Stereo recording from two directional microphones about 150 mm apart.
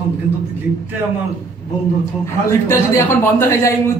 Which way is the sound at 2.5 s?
15° left (ahead or behind).